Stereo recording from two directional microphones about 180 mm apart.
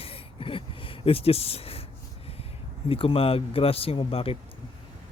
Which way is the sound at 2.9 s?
30° left (ahead or behind).